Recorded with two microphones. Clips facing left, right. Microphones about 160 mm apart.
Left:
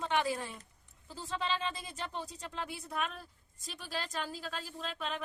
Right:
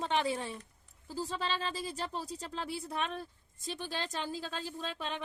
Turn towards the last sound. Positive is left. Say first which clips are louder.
# even
turn(degrees=-30)  # may be behind; listen again after turning